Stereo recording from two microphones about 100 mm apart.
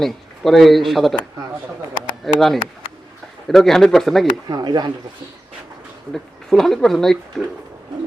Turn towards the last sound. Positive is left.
turn(degrees=5)  # may be behind; listen again after turning